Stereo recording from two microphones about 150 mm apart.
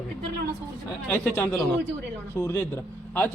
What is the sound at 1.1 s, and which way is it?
A man's voice, 15° left (ahead or behind).